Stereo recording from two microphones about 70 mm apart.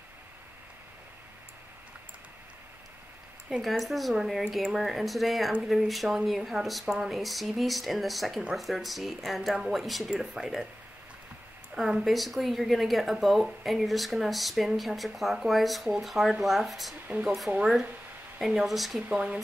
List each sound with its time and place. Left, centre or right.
3.4 s a woman's voice: centre
11.7 s a woman's voice: centre
17.5 s a woman's voice: centre
19.1 s speech: centre